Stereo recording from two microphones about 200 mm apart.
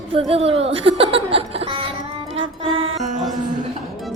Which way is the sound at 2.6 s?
25° right (ahead or behind).